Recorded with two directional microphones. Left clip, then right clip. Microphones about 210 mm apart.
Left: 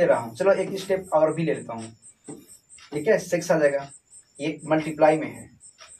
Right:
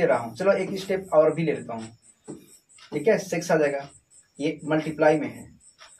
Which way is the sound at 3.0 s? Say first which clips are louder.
Left 1 dB; 15° left (ahead or behind).